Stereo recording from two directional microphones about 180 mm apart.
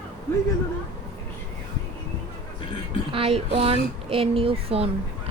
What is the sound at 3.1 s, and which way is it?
A woman's voice, 30° right (ahead or behind).